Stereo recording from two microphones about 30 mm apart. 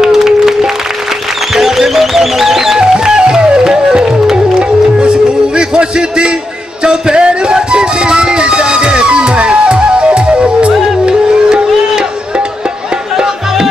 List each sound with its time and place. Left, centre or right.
0.0 s music: centre
3.3 s music: right
11.4 s a sound: right